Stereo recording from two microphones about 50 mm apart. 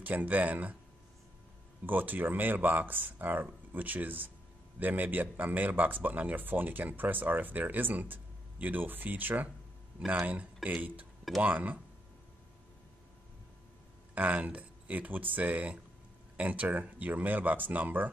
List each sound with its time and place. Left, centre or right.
0.0 s speech: right
1.9 s speech: right
14.1 s speech: right